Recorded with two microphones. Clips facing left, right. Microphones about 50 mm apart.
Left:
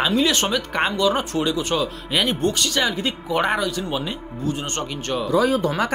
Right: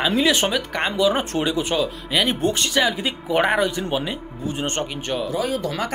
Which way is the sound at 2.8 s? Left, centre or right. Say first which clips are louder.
Right 1 dB; centre.